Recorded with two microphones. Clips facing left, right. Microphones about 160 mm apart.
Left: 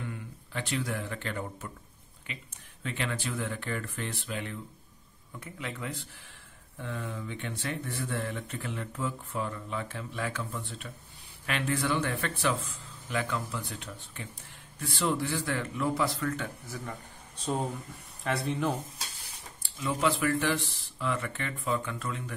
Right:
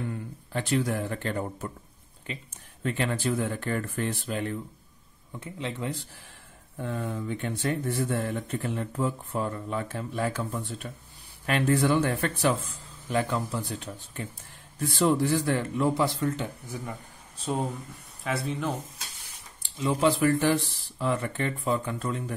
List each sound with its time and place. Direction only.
0.1 s speech: 40° right (ahead or behind)
5.3 s speech: 25° right (ahead or behind)
6.8 s speech: 45° right (ahead or behind)
16.6 s speech: 10° right (ahead or behind)
18.2 s speech: centre (ahead or behind)
19.8 s speech: 30° right (ahead or behind)